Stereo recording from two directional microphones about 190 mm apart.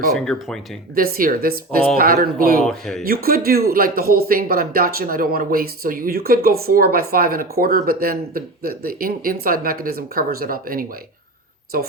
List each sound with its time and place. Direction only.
0.1 s speech: centre (ahead or behind)
0.9 s speech: 50° right (ahead or behind)
2.6 s speech: centre (ahead or behind)
3.1 s speech: 50° right (ahead or behind)